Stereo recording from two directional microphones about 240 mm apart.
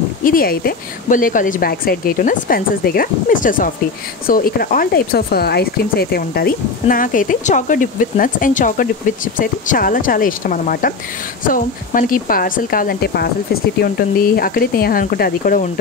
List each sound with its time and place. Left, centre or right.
0.2 s speech: left